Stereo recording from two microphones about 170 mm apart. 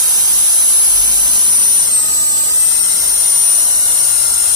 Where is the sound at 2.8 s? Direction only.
20° right (ahead or behind).